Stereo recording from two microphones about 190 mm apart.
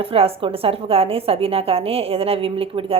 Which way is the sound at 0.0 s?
30° right (ahead or behind).